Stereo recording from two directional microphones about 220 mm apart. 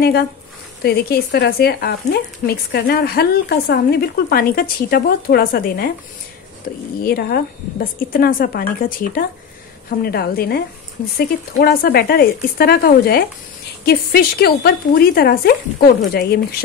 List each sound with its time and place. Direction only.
0.8 s speech: 50° left (ahead or behind)
7.0 s speech: 45° left (ahead or behind)